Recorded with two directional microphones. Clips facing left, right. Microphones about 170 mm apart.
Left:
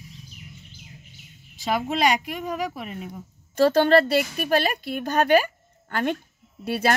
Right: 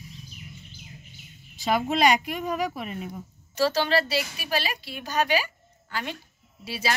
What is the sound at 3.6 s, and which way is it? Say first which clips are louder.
A woman's voice: left 7 dB; 50° left (ahead or behind).